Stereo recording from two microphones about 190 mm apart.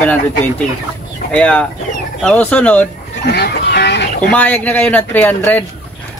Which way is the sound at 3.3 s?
60° left (ahead or behind).